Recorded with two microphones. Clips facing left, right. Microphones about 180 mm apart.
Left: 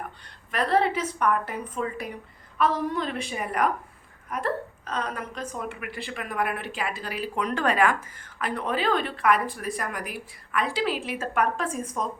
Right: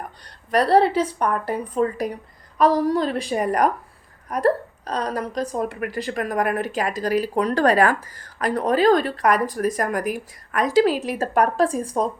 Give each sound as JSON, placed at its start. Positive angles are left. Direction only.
{"t": 0.3, "sound": "a woman's voice", "side_deg": -35}